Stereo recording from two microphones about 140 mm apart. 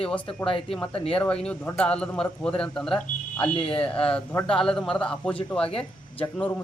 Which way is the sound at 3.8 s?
5° left (ahead or behind).